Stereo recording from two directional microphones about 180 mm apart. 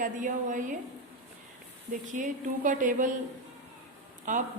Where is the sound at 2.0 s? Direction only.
45° right (ahead or behind).